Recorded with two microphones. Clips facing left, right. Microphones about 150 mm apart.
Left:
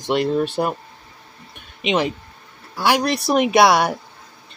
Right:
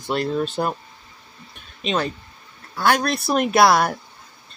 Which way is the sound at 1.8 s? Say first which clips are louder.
Left 3 dB; 15° left (ahead or behind).